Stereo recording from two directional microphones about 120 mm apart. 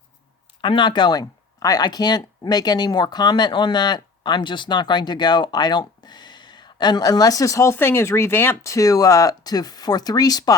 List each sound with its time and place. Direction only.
0.6 s speech: 40° left (ahead or behind)